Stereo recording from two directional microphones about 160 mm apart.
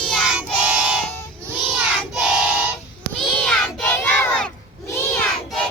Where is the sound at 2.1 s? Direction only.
5° right (ahead or behind).